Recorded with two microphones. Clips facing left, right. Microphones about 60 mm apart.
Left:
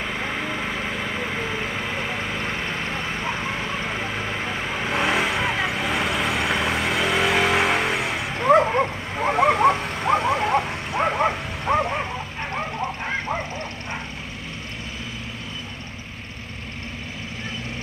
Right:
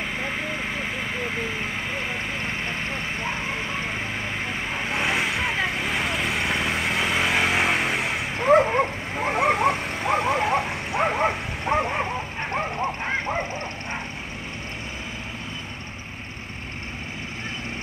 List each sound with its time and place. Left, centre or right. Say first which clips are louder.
4.9 s vehicle: left 3 dB; centre
8.5 s dog: left 1 dB; centre
11.7 s bow-wow: left 2 dB; right